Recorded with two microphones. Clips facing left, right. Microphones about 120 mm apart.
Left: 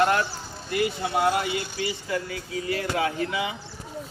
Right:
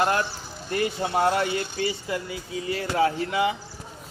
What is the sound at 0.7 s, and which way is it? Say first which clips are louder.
Speech: even; 40° right (ahead or behind).